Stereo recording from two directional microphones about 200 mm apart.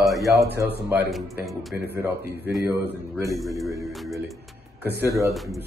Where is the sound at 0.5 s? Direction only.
10° right (ahead or behind).